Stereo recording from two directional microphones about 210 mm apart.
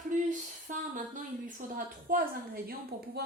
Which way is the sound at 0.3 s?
35° right (ahead or behind).